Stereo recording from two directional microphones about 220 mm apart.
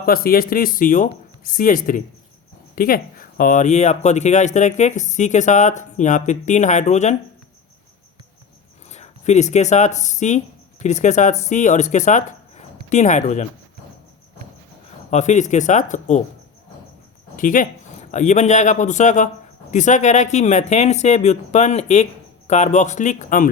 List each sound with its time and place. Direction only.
0.0 s speech: 40° left (ahead or behind)
8.9 s speech: 30° left (ahead or behind)
15.1 s speech: 35° left (ahead or behind)
17.3 s speech: 35° left (ahead or behind)